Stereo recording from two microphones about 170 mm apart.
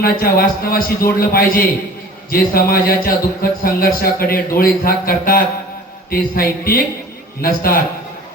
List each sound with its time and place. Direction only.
0.0 s a man's voice: 60° left (ahead or behind)